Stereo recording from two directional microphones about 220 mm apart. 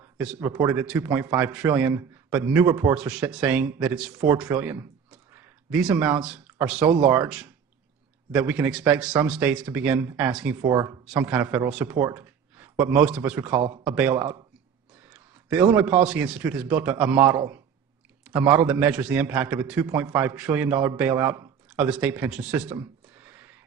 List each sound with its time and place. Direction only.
0.2 s a man's voice: 5° right (ahead or behind)
11.0 s a man's voice: 5° right (ahead or behind)